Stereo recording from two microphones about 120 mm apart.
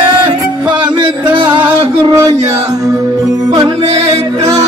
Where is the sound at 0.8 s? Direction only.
40° right (ahead or behind).